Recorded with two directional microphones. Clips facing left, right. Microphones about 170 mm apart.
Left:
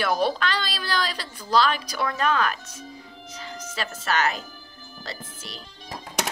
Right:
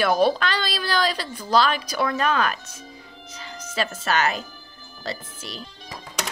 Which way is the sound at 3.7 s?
80° right.